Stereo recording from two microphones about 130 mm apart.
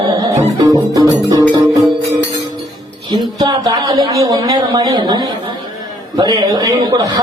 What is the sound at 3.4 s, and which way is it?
A man's voice, 30° right (ahead or behind).